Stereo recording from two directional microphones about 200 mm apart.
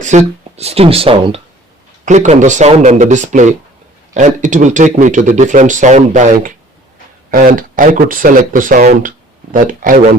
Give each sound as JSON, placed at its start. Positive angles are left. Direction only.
{"t": 0.0, "sound": "speech", "side_deg": -35}